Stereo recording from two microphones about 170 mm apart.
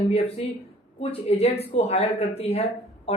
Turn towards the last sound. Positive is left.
turn(degrees=35)  # may be behind; listen again after turning